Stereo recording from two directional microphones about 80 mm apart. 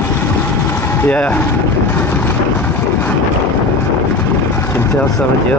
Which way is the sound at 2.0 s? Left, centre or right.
Left.